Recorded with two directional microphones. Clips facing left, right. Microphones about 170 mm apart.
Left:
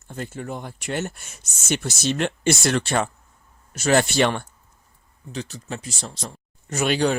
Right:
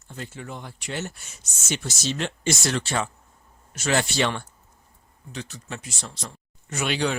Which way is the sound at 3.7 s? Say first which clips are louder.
Left 5 dB; 40° left (ahead or behind).